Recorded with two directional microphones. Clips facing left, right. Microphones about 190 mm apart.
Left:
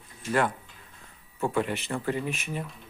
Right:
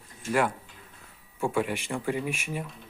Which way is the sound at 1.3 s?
10° right (ahead or behind).